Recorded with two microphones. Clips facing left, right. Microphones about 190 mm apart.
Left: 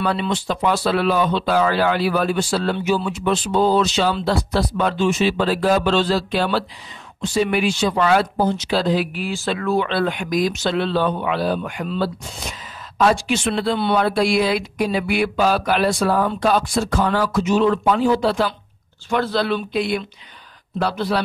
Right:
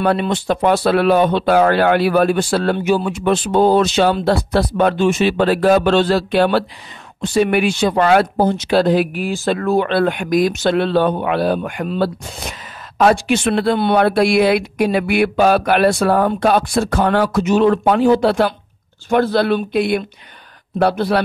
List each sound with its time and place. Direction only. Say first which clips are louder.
0.0 s speech: right 5 dB; 55° right (ahead or behind)